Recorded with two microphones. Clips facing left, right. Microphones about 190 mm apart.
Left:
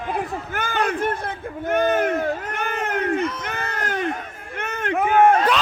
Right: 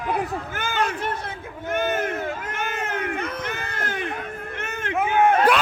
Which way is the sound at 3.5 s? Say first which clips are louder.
Left 3 dB; 40° left (ahead or behind).